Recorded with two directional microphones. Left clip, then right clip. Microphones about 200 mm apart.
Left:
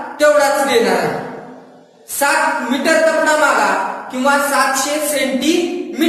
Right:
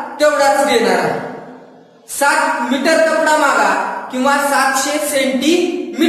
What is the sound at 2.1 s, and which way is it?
A woman's voice, 5° right (ahead or behind).